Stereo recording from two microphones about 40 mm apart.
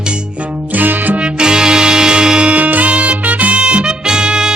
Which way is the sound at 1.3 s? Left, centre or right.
Centre.